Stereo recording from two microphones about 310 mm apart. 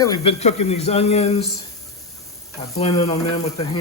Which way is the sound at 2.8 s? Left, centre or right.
Centre.